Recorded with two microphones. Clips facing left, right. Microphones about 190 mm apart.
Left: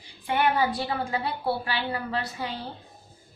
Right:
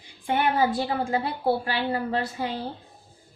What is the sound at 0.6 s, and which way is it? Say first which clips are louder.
A woman's voice: right 3 dB; 45° right (ahead or behind).